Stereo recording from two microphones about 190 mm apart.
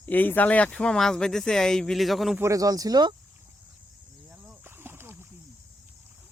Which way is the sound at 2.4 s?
20° right (ahead or behind).